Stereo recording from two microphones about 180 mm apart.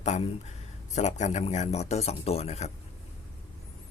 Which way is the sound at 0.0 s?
40° left (ahead or behind).